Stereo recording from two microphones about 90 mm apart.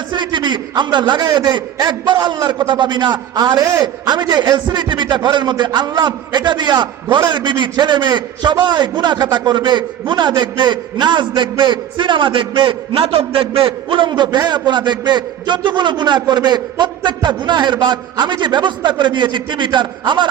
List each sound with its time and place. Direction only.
0.1 s a man's voice: 60° right (ahead or behind)